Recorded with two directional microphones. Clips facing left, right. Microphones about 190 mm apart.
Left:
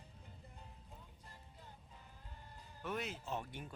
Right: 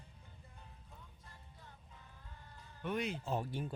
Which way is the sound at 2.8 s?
Centre (ahead or behind).